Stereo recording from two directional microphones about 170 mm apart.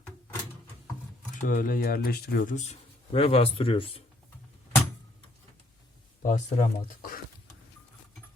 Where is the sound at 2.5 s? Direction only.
45° left (ahead or behind).